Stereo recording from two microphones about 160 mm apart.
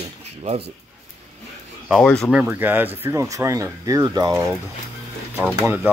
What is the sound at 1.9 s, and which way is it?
Speech, 5° left (ahead or behind).